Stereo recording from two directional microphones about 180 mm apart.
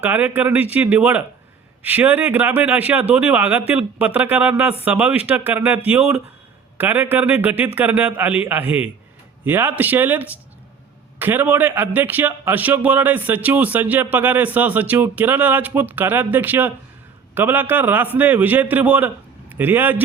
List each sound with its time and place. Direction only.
0.0 s a man's voice: 10° right (ahead or behind)